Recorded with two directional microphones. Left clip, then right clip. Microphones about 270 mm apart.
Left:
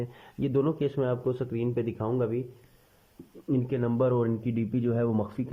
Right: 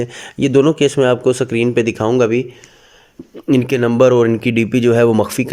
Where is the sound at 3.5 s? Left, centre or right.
Right.